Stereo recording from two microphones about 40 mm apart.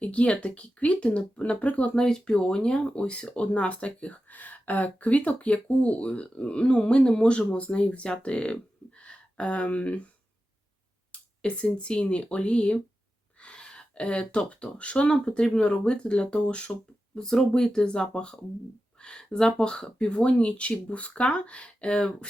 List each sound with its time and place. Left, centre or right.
0.0 s speech: left
2.0 s speech: centre
4.3 s speech: left
11.1 s speech: left
17.2 s speech: centre